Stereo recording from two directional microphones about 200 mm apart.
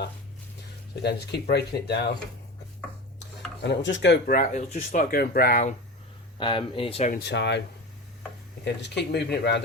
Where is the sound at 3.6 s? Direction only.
60° left (ahead or behind); by 5.7 s 45° left (ahead or behind).